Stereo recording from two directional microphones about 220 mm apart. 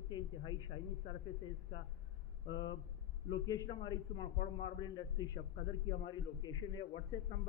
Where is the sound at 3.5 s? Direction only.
15° left (ahead or behind).